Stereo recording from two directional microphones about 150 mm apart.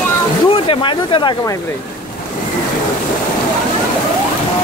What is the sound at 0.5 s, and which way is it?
Speech, 35° left (ahead or behind).